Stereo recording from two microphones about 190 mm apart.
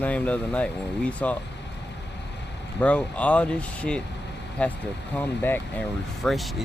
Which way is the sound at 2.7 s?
5° left (ahead or behind).